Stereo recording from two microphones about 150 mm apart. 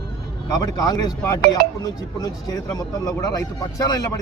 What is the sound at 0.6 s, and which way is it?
Speech, 25° left (ahead or behind).